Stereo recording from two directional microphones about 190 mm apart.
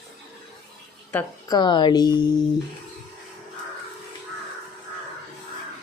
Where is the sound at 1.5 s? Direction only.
25° left (ahead or behind).